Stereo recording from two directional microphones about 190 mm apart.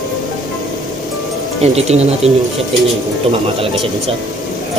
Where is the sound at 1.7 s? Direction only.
35° right (ahead or behind).